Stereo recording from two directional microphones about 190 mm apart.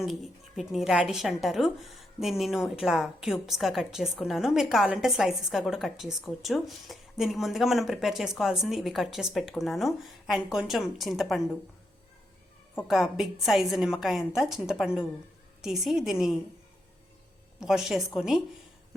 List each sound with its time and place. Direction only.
0.0 s a woman's voice: centre (ahead or behind)
12.9 s a woman's voice: centre (ahead or behind)
17.6 s a woman's voice: centre (ahead or behind)